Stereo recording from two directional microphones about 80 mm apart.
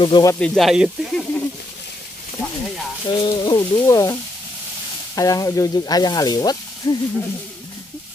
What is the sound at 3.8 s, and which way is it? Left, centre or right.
Sizzle, left.